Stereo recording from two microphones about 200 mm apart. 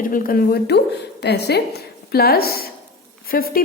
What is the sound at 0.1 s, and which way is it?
A woman's voice, 45° left (ahead or behind).